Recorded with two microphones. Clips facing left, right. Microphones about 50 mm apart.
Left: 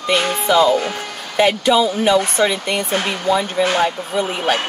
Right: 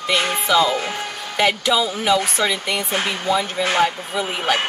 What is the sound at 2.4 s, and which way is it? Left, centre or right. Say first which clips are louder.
Speech: left 4 dB; left.